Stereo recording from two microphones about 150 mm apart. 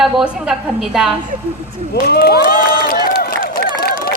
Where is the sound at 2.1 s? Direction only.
90° left.